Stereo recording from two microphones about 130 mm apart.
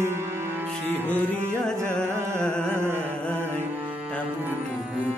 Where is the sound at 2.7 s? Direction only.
20° right (ahead or behind).